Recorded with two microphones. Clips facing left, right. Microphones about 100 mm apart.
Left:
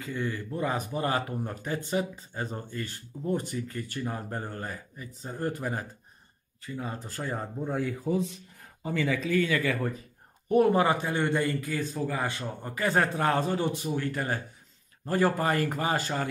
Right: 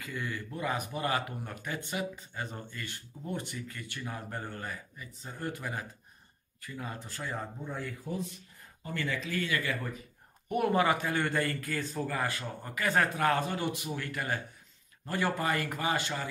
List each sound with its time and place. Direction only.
0.0 s speech: 30° left (ahead or behind)
6.6 s a man's voice: 25° left (ahead or behind)
7.1 s speech: 40° left (ahead or behind)
7.7 s speech: 90° left
10.5 s a man's voice: 30° left (ahead or behind)